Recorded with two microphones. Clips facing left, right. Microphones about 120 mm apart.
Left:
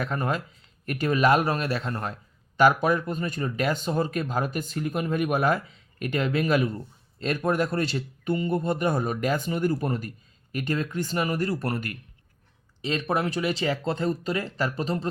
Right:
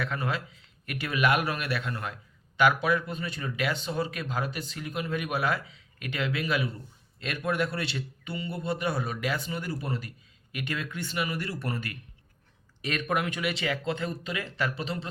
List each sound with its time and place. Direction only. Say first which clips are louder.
0.0 s a man's voice: left 4 dB; 45° left (ahead or behind)
12.8 s speech: left 3 dB; 30° left (ahead or behind)